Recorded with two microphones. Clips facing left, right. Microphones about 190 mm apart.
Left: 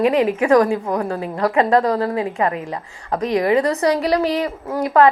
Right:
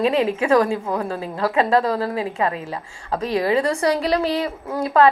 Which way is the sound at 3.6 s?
30° right (ahead or behind).